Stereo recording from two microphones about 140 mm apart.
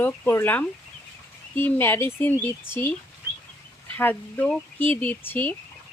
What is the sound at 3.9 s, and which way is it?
Speech, 15° left (ahead or behind).